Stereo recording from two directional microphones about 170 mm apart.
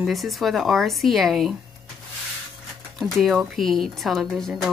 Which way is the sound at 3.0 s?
Centre (ahead or behind).